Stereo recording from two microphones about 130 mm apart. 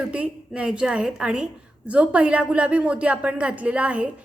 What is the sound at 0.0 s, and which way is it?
A woman's voice, 10° right (ahead or behind).